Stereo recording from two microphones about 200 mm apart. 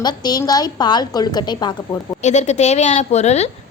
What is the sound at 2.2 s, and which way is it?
A woman's voice, 35° left (ahead or behind).